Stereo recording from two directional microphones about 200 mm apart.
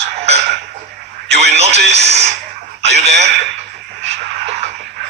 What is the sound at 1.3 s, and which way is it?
Speech, 55° right (ahead or behind).